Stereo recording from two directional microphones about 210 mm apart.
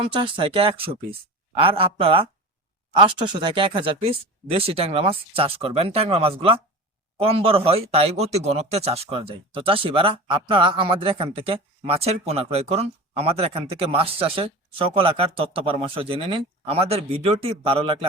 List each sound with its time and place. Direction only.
0.0 s speech: 25° right (ahead or behind)